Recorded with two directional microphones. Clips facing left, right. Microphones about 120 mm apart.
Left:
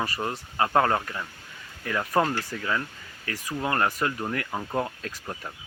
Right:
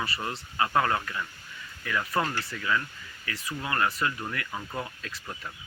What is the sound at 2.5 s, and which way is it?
Speech, 35° left (ahead or behind).